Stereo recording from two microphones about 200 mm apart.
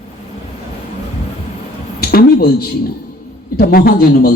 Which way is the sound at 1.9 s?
50° left (ahead or behind).